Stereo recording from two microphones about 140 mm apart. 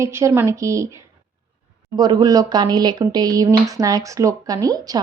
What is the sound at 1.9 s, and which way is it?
A woman's voice, 25° right (ahead or behind).